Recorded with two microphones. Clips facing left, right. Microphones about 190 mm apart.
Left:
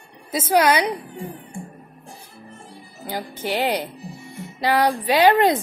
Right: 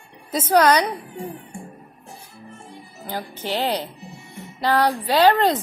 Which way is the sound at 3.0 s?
10° left (ahead or behind).